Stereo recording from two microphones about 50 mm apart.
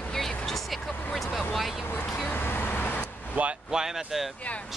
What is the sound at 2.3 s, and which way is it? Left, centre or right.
Vehicle, left.